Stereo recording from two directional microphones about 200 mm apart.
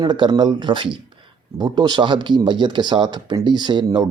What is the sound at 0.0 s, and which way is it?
Speech, 20° right (ahead or behind).